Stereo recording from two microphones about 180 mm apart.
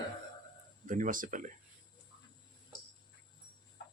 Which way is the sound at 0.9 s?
45° right (ahead or behind).